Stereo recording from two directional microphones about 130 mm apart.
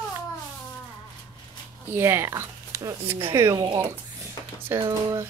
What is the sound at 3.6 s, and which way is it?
Speech, 35° right (ahead or behind).